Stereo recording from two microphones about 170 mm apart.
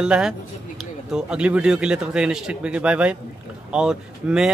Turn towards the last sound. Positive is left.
turn(degrees=-5)  # may be behind; listen again after turning